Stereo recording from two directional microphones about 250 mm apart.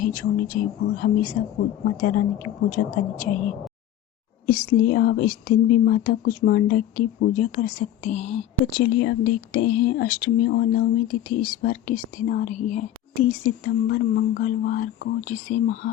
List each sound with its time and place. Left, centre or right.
0.0 s speech: left
4.4 s speech: left
8.8 s speech: left